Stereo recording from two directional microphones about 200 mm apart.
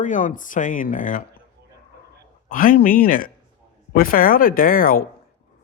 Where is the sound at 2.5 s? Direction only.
45° left (ahead or behind).